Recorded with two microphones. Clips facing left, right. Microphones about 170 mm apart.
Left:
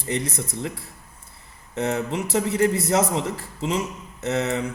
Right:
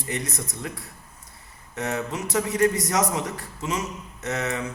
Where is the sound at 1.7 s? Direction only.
25° left (ahead or behind).